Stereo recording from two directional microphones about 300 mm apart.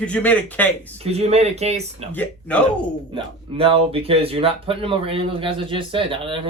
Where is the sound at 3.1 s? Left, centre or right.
Centre.